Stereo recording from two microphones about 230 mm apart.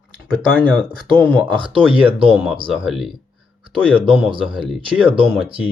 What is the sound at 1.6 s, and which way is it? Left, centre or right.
Speech, right.